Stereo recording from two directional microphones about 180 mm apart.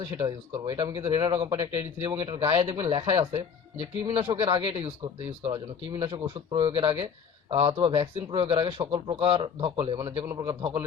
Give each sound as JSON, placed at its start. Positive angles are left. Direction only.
{"t": 0.6, "sound": "speech", "side_deg": -20}